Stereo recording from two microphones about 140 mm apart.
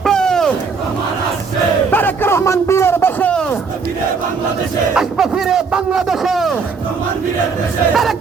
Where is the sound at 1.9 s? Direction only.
15° left (ahead or behind).